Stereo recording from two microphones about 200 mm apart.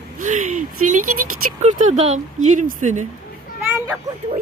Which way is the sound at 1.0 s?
90° right.